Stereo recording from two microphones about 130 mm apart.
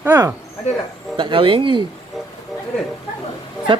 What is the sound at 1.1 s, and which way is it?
Speech, 40° right (ahead or behind).